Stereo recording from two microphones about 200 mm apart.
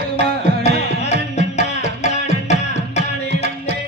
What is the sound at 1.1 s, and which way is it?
Music, 35° left (ahead or behind).